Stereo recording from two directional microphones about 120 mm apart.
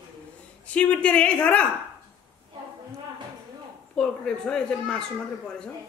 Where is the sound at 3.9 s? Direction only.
5° left (ahead or behind).